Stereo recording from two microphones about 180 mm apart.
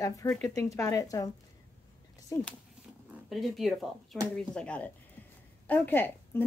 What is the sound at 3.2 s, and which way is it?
Speech, centre (ahead or behind).